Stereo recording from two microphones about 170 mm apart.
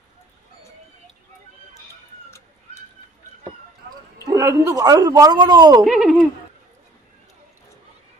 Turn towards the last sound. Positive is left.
turn(degrees=0)  # may be behind; listen again after turning